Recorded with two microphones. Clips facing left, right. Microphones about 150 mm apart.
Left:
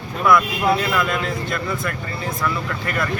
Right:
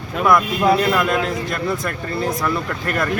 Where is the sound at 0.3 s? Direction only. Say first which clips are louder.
Right 1 dB; 40° right (ahead or behind).